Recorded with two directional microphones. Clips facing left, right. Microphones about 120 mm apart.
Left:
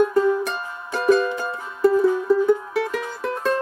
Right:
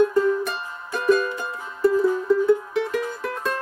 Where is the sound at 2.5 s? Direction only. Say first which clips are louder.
Even; 5° left (ahead or behind).